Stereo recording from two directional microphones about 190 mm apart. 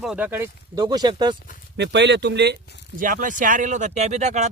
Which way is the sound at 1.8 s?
65° right (ahead or behind).